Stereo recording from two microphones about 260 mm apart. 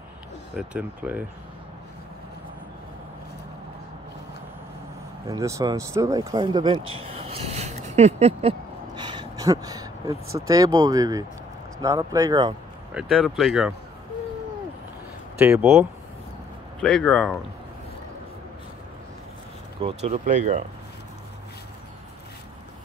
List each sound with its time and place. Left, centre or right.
0.6 s speech: centre
5.2 s speech: centre
6.9 s a sound: right
10.4 s speech: centre
12.9 s speech: centre
15.3 s speech: centre
16.8 s speech: centre
19.8 s speech: right